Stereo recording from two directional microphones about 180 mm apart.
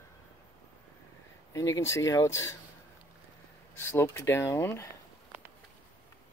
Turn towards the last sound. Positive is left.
turn(degrees=15)  # may be behind; listen again after turning